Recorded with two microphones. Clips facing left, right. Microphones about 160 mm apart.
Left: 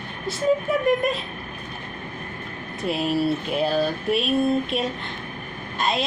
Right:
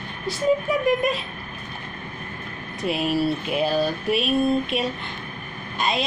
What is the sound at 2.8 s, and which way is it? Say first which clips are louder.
Speech: even; centre (ahead or behind).